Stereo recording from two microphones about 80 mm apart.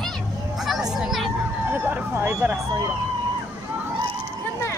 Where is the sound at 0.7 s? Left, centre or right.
Centre.